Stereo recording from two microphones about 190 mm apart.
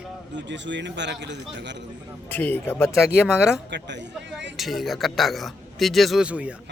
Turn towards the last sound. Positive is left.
turn(degrees=-5)  # may be behind; listen again after turning